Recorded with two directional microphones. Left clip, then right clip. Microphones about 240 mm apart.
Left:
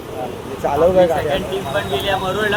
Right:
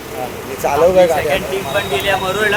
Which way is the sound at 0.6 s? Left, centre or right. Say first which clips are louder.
Right 3 dB; centre.